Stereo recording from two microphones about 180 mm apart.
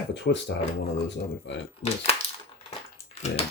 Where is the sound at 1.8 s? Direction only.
40° left (ahead or behind).